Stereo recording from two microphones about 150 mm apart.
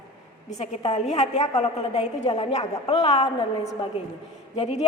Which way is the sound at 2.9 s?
35° left (ahead or behind).